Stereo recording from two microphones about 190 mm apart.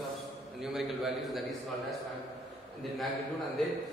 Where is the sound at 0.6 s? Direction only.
Centre (ahead or behind).